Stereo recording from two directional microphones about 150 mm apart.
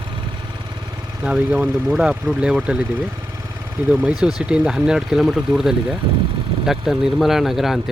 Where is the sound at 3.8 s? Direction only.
10° right (ahead or behind).